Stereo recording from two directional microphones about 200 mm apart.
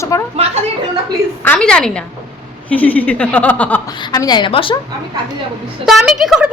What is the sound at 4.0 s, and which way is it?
Speech, 20° left (ahead or behind).